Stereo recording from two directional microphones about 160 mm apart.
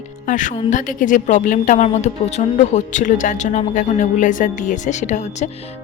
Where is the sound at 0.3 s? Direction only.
55° left (ahead or behind).